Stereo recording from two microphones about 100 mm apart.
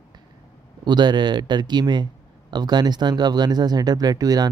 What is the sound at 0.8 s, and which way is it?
Speech, 50° right (ahead or behind).